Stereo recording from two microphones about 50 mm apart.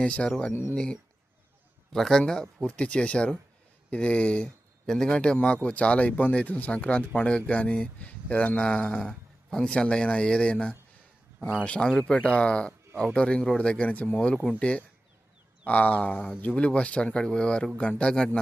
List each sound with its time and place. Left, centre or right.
0.0 s speech: left
0.5 s speech: left
1.9 s speech: centre
2.6 s speech: left
4.4 s a sound: centre
5.0 s a man's voice: left
9.7 s speech: left
15.6 s a sound: left
16.3 s speech: left